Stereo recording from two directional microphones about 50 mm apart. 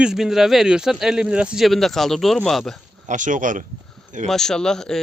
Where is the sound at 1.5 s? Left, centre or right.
Centre.